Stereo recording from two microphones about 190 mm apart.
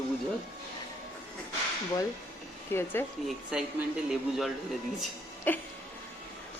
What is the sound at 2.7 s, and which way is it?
Speech, 10° left (ahead or behind).